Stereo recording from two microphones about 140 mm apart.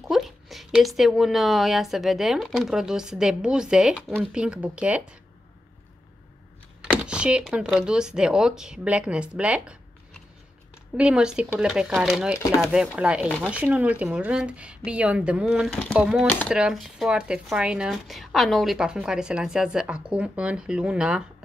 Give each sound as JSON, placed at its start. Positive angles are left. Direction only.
{"t": 0.1, "sound": "speech", "side_deg": 0}
{"t": 7.1, "sound": "computer keyboard", "side_deg": -10}
{"t": 7.4, "sound": "speech", "side_deg": -5}
{"t": 11.0, "sound": "speech", "side_deg": -5}
{"t": 16.3, "sound": "speech", "side_deg": 10}
{"t": 16.5, "sound": "speech", "side_deg": -5}